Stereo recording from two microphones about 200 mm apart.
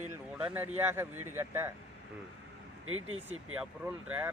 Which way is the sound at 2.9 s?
90° right.